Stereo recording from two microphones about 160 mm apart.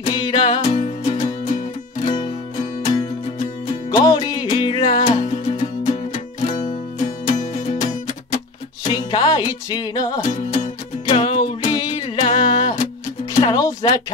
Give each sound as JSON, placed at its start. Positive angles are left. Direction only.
{"t": 0.1, "sound": "music", "side_deg": 30}
{"t": 3.9, "sound": "music", "side_deg": 25}
{"t": 8.8, "sound": "music", "side_deg": 25}
{"t": 10.2, "sound": "music", "side_deg": 50}
{"t": 12.2, "sound": "music", "side_deg": 35}